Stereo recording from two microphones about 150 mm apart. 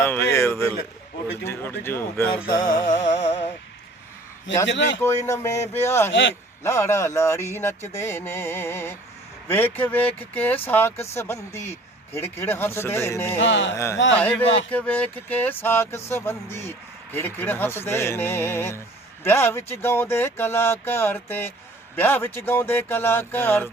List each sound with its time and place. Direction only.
0.0 s a sound: 15° left (ahead or behind)
1.5 s speech: 15° left (ahead or behind)
2.8 s music: 60° left (ahead or behind)
4.5 s a man's voice: 20° left (ahead or behind)